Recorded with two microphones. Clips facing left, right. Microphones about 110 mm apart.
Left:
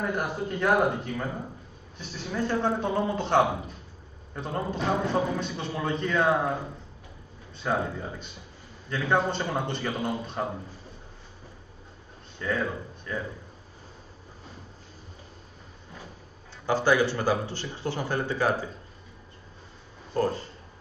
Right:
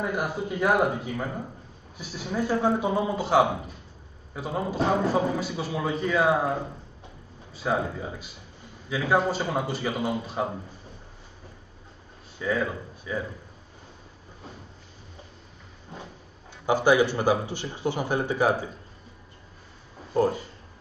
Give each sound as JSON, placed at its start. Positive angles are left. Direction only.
{"t": 0.0, "sound": "a man's voice", "side_deg": -5}
{"t": 7.5, "sound": "a man's voice", "side_deg": -5}
{"t": 12.4, "sound": "speech", "side_deg": -5}
{"t": 16.6, "sound": "speech", "side_deg": -15}
{"t": 20.2, "sound": "speech", "side_deg": -15}